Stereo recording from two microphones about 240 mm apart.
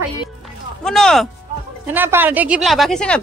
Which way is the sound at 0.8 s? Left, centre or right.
Centre.